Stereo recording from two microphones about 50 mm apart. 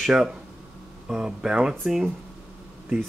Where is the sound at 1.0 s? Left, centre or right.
Centre.